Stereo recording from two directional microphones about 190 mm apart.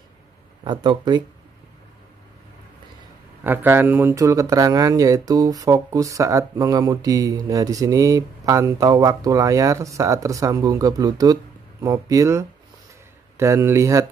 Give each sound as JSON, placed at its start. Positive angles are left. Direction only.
{"t": 0.7, "sound": "speech", "side_deg": -25}
{"t": 3.4, "sound": "speech", "side_deg": -10}